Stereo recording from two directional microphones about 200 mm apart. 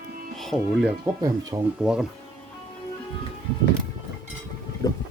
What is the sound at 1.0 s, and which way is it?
Speech, 15° right (ahead or behind).